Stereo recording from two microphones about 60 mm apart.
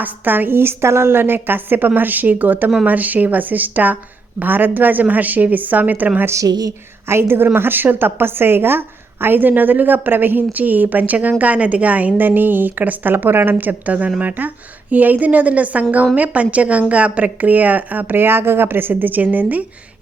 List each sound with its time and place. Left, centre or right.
0.0 s a woman's voice: right
6.4 s a woman's voice: right
7.1 s a woman's voice: right